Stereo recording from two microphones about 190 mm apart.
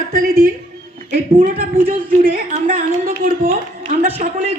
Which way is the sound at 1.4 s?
50° right (ahead or behind).